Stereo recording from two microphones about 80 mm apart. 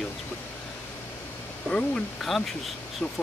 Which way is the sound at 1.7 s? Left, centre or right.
Centre.